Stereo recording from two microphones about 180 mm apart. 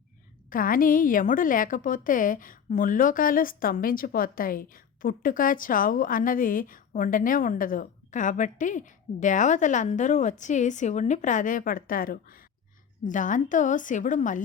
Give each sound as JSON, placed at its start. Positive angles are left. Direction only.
{"t": 0.5, "sound": "a woman's voice", "side_deg": 50}